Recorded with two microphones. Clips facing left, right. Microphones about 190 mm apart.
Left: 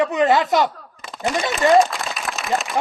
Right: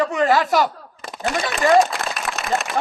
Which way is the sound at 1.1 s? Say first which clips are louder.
Left 1 dB; centre (ahead or behind).